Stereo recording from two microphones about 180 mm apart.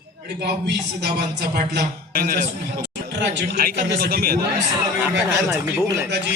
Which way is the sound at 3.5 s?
55° right (ahead or behind).